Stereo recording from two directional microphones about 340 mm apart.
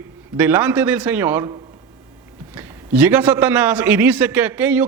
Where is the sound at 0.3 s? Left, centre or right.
Centre.